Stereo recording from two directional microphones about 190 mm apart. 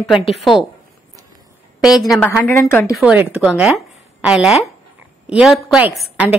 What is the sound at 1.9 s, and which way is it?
Speech, centre (ahead or behind).